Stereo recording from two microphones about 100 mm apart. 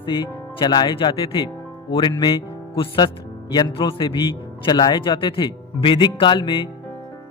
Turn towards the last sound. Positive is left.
turn(degrees=55)  # may be behind; listen again after turning